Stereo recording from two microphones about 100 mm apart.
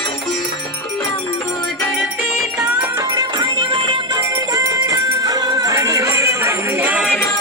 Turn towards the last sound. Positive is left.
turn(degrees=-20)  # may be behind; listen again after turning